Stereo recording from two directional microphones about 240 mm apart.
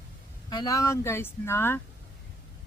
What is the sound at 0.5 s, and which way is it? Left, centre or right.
Speech, centre.